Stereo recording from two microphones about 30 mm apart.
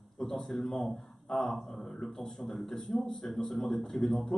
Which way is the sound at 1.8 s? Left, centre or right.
Centre.